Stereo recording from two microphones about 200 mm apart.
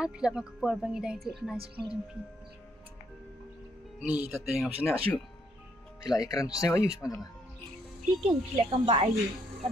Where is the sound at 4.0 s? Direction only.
5° right (ahead or behind).